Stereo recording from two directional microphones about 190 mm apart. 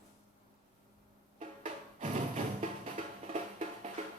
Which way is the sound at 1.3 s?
40° right (ahead or behind).